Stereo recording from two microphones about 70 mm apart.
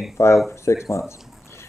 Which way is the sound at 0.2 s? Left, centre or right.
Left.